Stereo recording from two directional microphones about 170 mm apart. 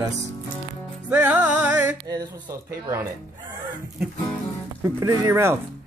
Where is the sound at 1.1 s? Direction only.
10° right (ahead or behind).